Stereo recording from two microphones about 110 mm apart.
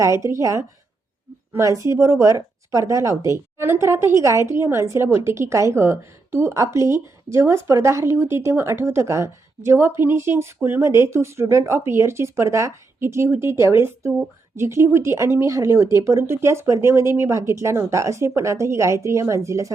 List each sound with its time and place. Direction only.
0.0 s a woman's voice: 30° right (ahead or behind)